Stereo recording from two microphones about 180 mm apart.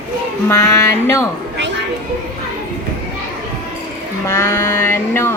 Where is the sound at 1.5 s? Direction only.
80° right.